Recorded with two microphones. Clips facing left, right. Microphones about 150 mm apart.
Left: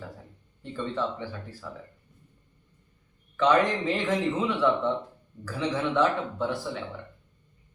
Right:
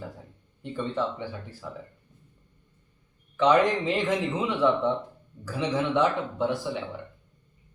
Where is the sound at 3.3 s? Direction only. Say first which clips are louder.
Right 2 dB; 15° right (ahead or behind).